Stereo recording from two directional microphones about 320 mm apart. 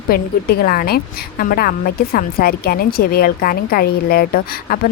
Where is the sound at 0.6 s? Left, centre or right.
Left.